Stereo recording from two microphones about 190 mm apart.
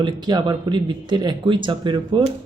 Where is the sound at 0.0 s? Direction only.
20° right (ahead or behind).